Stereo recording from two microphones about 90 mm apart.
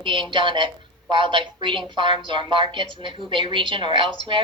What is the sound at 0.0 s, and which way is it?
A woman's voice, 65° right (ahead or behind).